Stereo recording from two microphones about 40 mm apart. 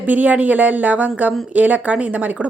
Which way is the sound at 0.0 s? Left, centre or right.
Right.